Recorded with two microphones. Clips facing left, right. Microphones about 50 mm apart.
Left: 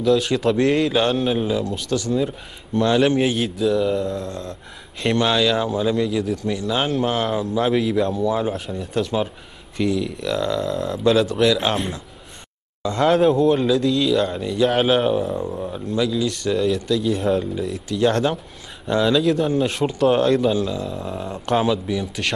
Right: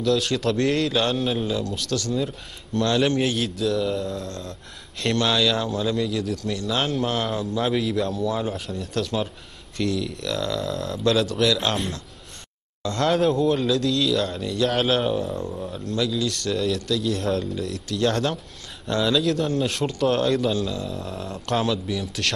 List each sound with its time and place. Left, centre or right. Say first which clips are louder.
0.0 s speech: left 4 dB; centre
5.0 s speech: left 3 dB; centre